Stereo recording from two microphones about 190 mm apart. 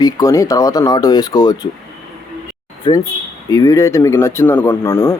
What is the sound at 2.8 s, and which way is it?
Speech, 20° left (ahead or behind).